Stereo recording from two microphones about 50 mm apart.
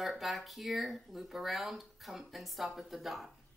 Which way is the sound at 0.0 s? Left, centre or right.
Centre.